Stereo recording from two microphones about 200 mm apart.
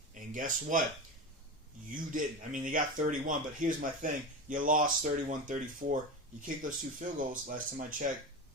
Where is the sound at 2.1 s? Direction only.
40° right (ahead or behind).